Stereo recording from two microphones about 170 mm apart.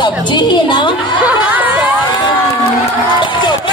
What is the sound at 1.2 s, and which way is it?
Speech, 10° right (ahead or behind).